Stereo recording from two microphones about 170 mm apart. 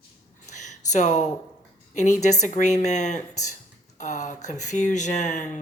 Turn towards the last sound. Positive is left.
turn(degrees=45)  # may be behind; listen again after turning